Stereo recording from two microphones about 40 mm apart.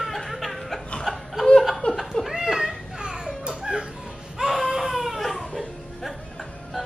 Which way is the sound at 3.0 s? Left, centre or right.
Centre.